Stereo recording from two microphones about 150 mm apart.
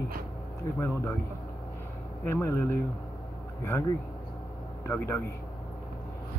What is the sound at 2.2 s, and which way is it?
Speech, 15° left (ahead or behind).